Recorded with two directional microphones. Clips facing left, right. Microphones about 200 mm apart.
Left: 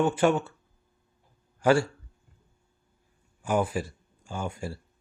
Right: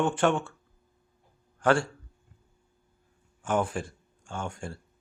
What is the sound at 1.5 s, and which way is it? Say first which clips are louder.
Speech: left 2 dB; 5° left (ahead or behind).